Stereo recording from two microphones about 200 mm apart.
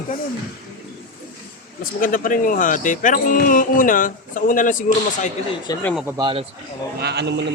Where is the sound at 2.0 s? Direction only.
45° left (ahead or behind).